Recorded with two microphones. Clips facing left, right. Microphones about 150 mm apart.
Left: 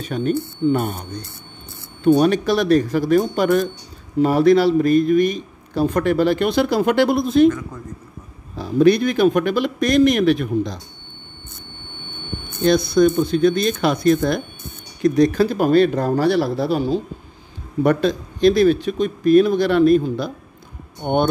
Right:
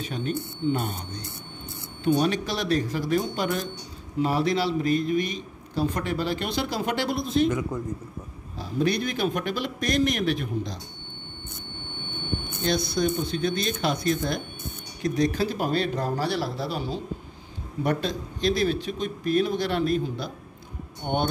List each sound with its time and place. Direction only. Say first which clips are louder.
0.0 s speech: left 8 dB; 55° left (ahead or behind)
2.1 s speech: left 9 dB; 55° left (ahead or behind)
8.5 s a man's voice: left 11 dB; 65° left (ahead or behind)
12.6 s speech: left 10 dB; 55° left (ahead or behind)
21.0 s speech: left 8 dB; 50° left (ahead or behind)